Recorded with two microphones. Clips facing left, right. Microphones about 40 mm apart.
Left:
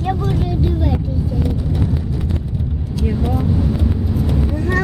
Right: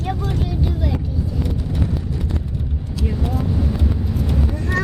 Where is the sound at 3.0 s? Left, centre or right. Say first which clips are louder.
Left 4 dB; centre.